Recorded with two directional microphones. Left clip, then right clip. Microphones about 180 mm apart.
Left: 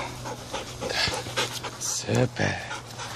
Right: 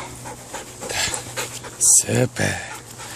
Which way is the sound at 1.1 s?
5° left (ahead or behind).